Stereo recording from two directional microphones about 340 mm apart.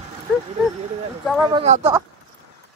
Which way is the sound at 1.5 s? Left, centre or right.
Centre.